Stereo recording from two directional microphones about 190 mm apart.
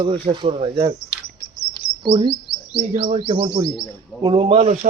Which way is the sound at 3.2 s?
25° right (ahead or behind).